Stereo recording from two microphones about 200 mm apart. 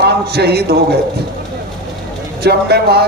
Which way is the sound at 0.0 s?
55° right (ahead or behind).